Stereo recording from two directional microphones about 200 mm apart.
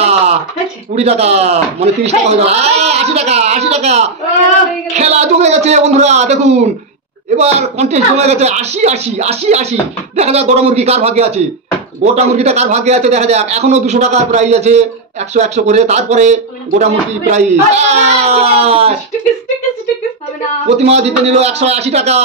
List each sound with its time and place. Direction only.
0.9 s a man's voice: 30° right (ahead or behind)
20.7 s a man's voice: 30° right (ahead or behind)